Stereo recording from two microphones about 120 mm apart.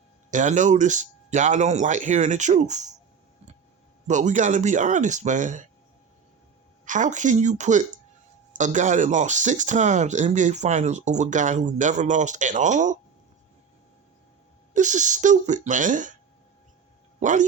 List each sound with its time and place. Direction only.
0.3 s speech: 90° right
4.0 s speech: 80° right
6.8 s speech: 90° right
14.7 s speech: 90° right
17.2 s speech: 90° right